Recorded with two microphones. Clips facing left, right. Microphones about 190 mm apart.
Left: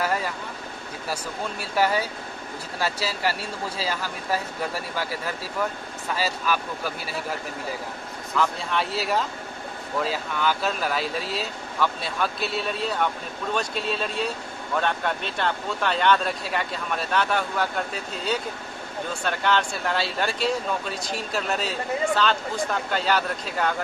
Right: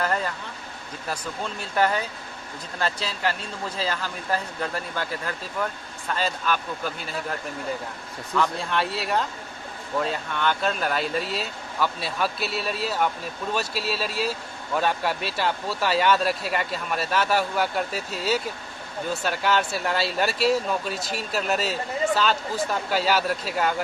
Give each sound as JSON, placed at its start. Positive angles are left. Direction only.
{"t": 0.0, "sound": "vehicle", "side_deg": 10}
{"t": 1.1, "sound": "speech", "side_deg": 10}
{"t": 6.1, "sound": "speech", "side_deg": 5}
{"t": 8.4, "sound": "speech", "side_deg": 0}